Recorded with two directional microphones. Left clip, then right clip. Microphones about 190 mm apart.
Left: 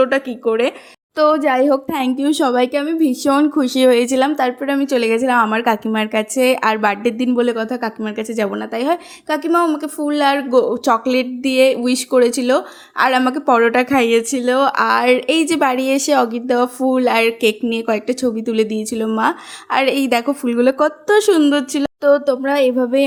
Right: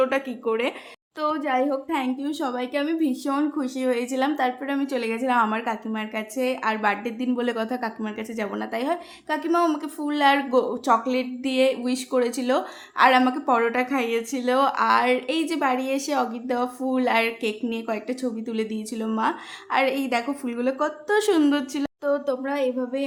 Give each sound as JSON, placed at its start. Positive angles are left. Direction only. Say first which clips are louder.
{"t": 0.0, "sound": "speech", "louder": "left 7 dB", "side_deg": 25}
{"t": 1.1, "sound": "a woman's voice", "louder": "left 10 dB", "side_deg": 40}
{"t": 2.8, "sound": "a woman's voice", "louder": "left 8 dB", "side_deg": 30}
{"t": 7.3, "sound": "a woman's voice", "louder": "left 5 dB", "side_deg": 25}